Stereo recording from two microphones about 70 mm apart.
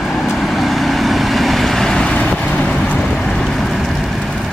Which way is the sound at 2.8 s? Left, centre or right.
Centre.